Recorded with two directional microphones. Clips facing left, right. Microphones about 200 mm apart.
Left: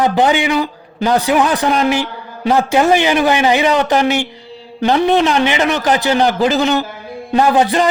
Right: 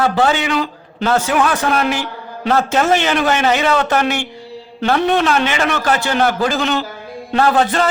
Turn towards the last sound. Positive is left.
turn(degrees=15)  # may be behind; listen again after turning